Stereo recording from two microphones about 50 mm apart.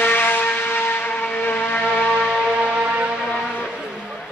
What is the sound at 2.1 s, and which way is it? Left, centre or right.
Siren, centre.